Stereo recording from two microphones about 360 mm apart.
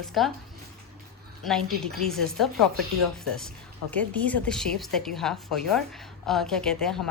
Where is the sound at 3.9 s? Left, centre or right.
Centre.